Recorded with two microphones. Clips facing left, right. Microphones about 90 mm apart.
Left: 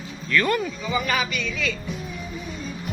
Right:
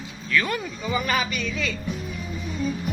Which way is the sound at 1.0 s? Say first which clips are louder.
Even; 35° right (ahead or behind).